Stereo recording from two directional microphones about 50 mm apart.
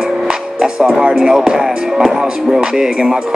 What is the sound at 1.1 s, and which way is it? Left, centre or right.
Music, centre.